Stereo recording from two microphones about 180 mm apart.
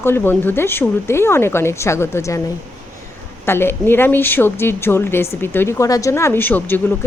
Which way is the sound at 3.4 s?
15° left (ahead or behind).